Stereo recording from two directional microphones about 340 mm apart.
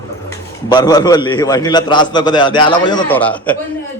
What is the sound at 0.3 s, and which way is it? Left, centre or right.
A man's voice, centre.